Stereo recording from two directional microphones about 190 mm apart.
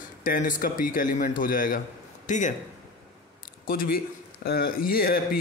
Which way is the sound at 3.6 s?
50° left (ahead or behind).